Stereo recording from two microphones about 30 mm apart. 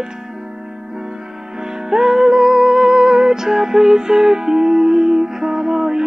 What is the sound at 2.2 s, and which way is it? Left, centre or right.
Music, centre.